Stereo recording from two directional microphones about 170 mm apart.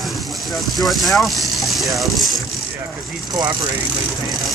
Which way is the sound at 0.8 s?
Centre (ahead or behind).